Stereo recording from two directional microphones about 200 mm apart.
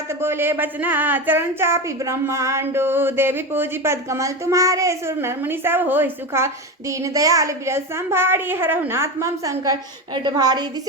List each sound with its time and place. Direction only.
0.2 s a woman's voice: 10° right (ahead or behind)